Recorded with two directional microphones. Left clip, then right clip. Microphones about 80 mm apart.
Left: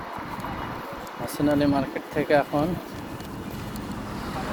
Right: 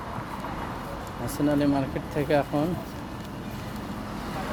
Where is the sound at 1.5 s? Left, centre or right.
Right.